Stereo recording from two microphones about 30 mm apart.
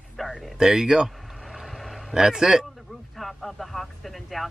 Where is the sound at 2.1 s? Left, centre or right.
Centre.